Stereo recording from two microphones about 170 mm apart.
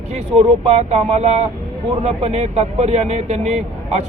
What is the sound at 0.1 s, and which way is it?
Speech, 40° right (ahead or behind).